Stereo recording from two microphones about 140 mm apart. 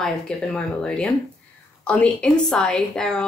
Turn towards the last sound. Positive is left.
turn(degrees=5)  # may be behind; listen again after turning